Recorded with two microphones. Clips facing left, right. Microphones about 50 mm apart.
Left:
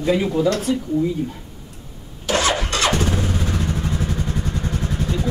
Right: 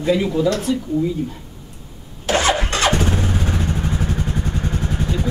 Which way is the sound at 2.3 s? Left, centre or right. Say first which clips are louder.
Right 2 dB; right.